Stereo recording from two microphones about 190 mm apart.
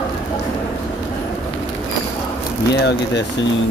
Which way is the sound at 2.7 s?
65° left (ahead or behind).